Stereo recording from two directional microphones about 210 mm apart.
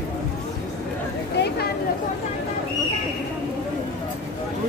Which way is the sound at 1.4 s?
55° left (ahead or behind).